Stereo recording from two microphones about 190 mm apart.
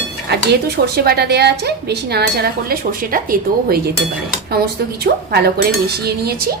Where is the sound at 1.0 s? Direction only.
55° right (ahead or behind).